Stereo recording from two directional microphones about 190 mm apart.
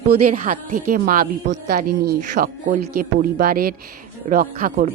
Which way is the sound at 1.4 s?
60° right (ahead or behind).